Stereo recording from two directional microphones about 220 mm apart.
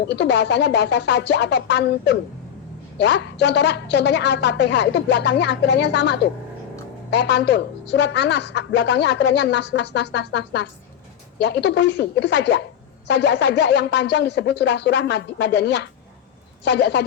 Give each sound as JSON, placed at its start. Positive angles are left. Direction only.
{"t": 0.1, "sound": "a woman's voice", "side_deg": 50}